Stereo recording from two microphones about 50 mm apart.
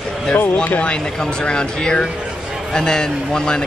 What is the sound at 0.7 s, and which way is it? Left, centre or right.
A man's voice, left.